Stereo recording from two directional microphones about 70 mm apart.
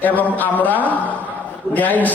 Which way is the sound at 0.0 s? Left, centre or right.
Left.